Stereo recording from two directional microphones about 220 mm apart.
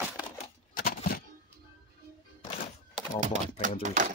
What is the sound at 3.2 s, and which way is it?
Speech, 35° right (ahead or behind).